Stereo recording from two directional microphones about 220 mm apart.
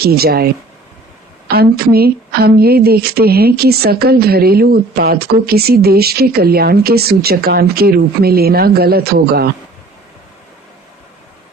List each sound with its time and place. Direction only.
0.0 s speech: 45° right (ahead or behind)